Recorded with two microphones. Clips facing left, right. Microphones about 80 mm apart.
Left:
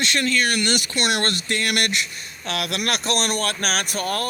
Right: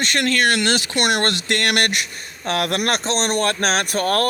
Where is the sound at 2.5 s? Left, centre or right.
Right.